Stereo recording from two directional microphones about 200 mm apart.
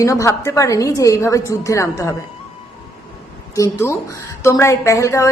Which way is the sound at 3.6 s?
15° left (ahead or behind).